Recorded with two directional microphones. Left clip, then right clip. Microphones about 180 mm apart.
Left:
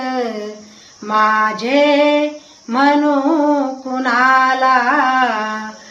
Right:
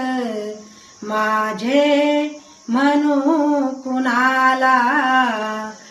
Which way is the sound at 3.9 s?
15° right (ahead or behind).